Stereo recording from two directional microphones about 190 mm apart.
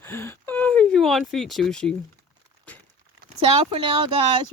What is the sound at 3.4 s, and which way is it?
Speech, 30° right (ahead or behind).